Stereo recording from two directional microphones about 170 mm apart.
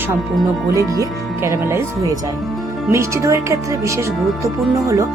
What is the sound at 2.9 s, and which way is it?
Speech, 15° right (ahead or behind).